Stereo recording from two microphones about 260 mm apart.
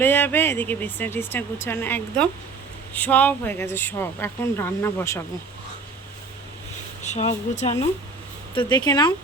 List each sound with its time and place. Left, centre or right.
0.0 s speech: centre
7.0 s speech: left
8.5 s speech: centre